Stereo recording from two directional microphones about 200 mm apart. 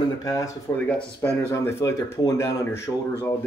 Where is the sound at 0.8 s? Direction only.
5° left (ahead or behind).